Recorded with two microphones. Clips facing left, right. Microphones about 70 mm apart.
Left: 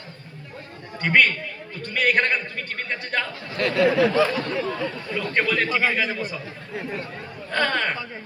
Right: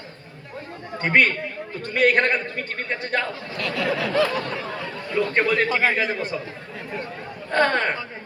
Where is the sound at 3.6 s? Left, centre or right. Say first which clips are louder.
Left 6 dB; left.